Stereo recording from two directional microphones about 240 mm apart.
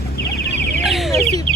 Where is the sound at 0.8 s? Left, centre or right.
Centre.